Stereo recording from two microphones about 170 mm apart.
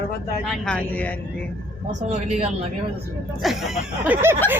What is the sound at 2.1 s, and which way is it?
Speech, 40° right (ahead or behind).